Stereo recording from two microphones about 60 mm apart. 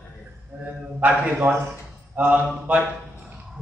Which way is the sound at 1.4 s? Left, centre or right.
Centre.